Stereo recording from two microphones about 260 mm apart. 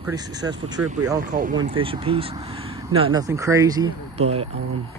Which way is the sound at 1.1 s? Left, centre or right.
Right.